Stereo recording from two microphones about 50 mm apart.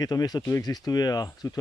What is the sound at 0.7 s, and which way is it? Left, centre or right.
Speech, left.